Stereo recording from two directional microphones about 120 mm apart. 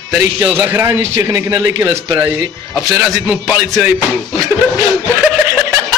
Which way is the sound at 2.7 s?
5° right (ahead or behind).